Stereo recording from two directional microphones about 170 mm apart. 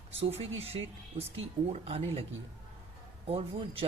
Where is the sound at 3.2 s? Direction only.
35° right (ahead or behind).